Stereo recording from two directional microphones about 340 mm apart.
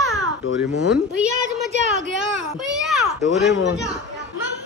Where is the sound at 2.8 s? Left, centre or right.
Centre.